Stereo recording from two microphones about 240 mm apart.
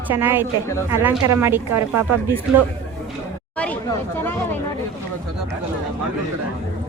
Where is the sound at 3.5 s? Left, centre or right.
Centre.